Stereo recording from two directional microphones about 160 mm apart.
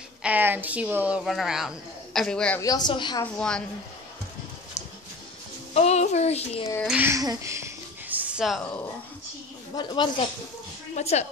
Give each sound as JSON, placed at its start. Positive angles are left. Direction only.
{"t": 0.2, "sound": "a woman's voice", "side_deg": -10}
{"t": 2.6, "sound": "a woman's voice", "side_deg": 25}
{"t": 3.3, "sound": "a woman's voice", "side_deg": 5}
{"t": 5.8, "sound": "speech", "side_deg": 45}
{"t": 6.9, "sound": "speech", "side_deg": -15}
{"t": 9.8, "sound": "a woman's voice", "side_deg": 30}
{"t": 11.0, "sound": "a woman's voice", "side_deg": 45}